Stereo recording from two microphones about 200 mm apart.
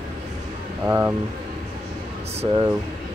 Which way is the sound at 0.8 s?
10° right (ahead or behind).